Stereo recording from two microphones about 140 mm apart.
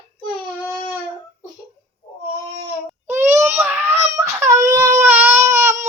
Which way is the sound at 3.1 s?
15° right (ahead or behind).